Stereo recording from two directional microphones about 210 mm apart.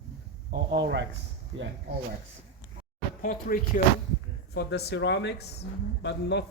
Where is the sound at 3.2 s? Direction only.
40° left (ahead or behind).